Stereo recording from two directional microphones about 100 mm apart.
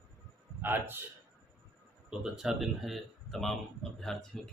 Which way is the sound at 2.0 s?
5° right (ahead or behind).